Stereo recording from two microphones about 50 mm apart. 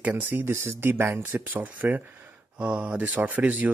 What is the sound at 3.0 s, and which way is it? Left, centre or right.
Speech, right.